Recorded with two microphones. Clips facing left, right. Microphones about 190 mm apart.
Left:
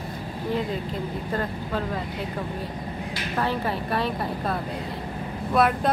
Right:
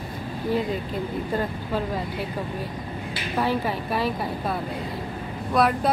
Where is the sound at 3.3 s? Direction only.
5° right (ahead or behind).